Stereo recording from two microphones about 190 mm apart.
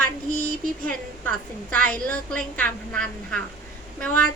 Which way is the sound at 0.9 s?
5° left (ahead or behind).